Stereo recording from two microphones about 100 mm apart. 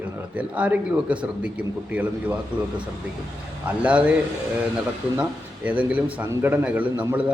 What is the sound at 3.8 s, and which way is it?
Speech, 10° right (ahead or behind).